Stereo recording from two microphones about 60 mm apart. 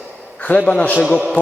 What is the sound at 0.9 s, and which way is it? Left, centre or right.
Speech, centre.